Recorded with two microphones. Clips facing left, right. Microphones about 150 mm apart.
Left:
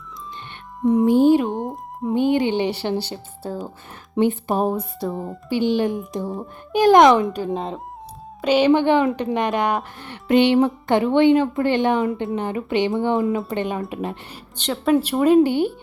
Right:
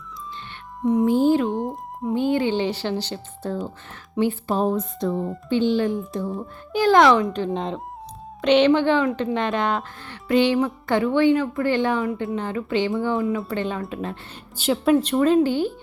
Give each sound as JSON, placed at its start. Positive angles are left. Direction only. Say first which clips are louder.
{"t": 1.0, "sound": "a woman's voice", "louder": "left 4 dB", "side_deg": 20}
{"t": 1.5, "sound": "speech", "louder": "even", "side_deg": 0}
{"t": 2.1, "sound": "a woman's voice", "louder": "left 2 dB", "side_deg": 20}
{"t": 4.2, "sound": "a woman's voice", "louder": "left 2 dB", "side_deg": 20}
{"t": 5.5, "sound": "a woman's voice", "louder": "left 1 dB", "side_deg": 15}
{"t": 7.3, "sound": "a woman's voice", "louder": "even", "side_deg": 5}
{"t": 14.5, "sound": "a woman's voice", "louder": "right 1 dB", "side_deg": -5}
{"t": 14.9, "sound": "a woman's voice", "louder": "left 5 dB", "side_deg": 10}